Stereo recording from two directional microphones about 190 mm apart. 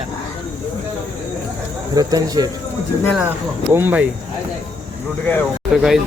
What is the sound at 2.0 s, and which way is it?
Speech, 20° right (ahead or behind).